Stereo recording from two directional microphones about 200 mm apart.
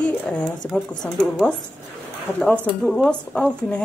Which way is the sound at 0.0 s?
5° left (ahead or behind).